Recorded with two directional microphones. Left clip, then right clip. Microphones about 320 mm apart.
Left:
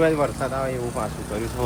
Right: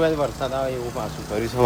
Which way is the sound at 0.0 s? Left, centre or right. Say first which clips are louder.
Left 1 dB; centre.